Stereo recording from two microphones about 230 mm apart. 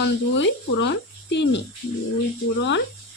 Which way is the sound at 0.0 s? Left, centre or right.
Left.